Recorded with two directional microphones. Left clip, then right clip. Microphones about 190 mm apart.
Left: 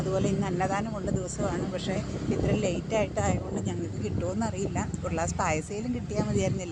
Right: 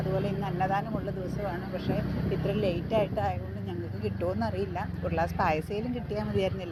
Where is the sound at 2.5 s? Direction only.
5° left (ahead or behind).